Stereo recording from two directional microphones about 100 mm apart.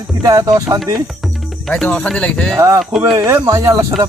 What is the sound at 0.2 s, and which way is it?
Speech, 40° right (ahead or behind).